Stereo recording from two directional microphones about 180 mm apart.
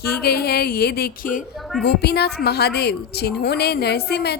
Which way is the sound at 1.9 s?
65° left (ahead or behind).